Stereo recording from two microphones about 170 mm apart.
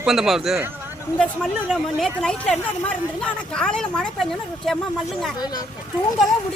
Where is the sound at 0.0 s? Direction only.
Centre (ahead or behind).